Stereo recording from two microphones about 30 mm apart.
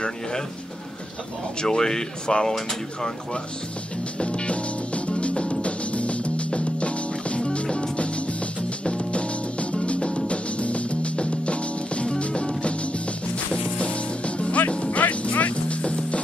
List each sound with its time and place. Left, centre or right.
1.6 s speech: left
4.2 s music: left